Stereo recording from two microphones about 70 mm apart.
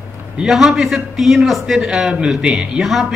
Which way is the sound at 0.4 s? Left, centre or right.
Centre.